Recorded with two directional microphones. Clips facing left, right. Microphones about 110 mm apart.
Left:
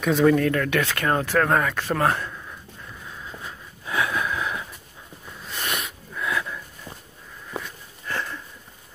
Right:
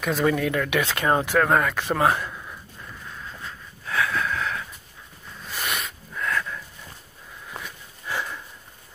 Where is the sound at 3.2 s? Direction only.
15° left (ahead or behind).